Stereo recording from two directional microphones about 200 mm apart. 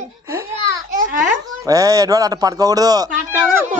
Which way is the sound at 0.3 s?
15° right (ahead or behind).